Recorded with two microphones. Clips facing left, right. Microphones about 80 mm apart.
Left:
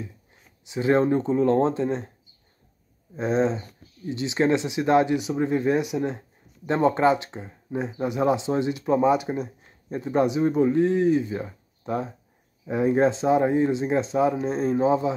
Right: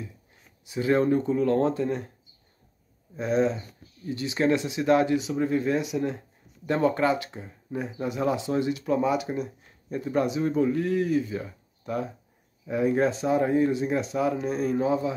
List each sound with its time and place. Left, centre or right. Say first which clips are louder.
0.7 s speech: left 2 dB; left
3.2 s speech: left 1 dB; left